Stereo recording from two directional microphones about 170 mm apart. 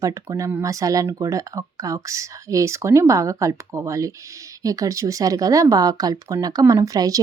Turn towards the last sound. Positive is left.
turn(degrees=-20)  # may be behind; listen again after turning